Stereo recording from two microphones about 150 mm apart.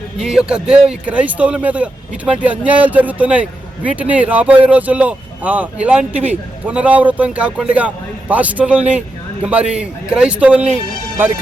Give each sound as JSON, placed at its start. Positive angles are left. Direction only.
{"t": 0.2, "sound": "speech", "side_deg": -5}